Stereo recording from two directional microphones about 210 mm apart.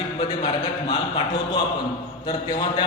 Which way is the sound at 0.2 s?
20° left (ahead or behind).